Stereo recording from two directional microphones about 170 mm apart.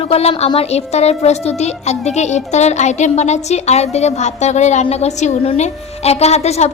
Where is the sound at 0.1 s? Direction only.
35° left (ahead or behind).